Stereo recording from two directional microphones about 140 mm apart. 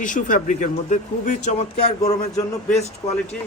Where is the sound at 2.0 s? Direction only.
25° left (ahead or behind).